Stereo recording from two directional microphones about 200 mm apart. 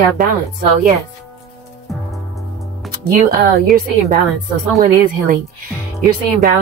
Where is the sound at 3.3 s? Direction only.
45° right (ahead or behind).